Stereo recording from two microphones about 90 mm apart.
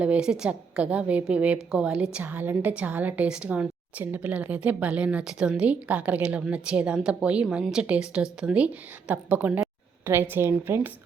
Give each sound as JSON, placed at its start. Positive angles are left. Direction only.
{"t": 0.0, "sound": "a woman's voice", "side_deg": -10}